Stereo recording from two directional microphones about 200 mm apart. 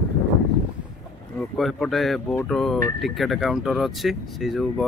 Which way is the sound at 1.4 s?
Centre (ahead or behind).